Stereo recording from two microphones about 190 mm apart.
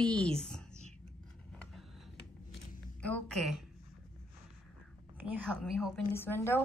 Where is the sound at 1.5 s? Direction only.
5° left (ahead or behind).